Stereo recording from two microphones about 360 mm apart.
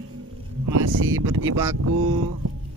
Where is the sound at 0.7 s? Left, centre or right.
Right.